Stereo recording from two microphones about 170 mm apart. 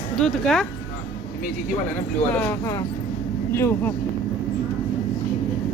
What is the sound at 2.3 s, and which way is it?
Speech, 15° left (ahead or behind).